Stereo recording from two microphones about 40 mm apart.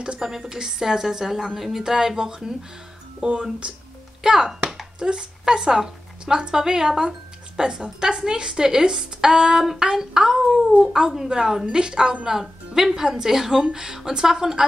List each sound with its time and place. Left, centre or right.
0.2 s speech: centre
3.2 s speech: right
4.2 s a woman's voice: centre
12.3 s speech: centre